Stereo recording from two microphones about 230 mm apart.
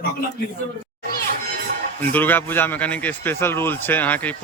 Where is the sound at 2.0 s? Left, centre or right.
Centre.